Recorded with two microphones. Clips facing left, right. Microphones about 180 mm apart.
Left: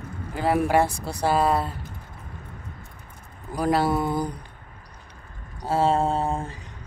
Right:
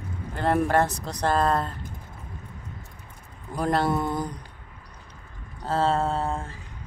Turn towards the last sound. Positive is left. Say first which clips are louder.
# left 2 dB
turn(degrees=15)  # may be behind; listen again after turning